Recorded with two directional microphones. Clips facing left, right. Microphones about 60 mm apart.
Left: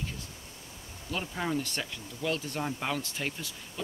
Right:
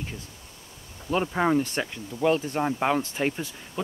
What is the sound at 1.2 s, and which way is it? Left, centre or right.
Speech, right.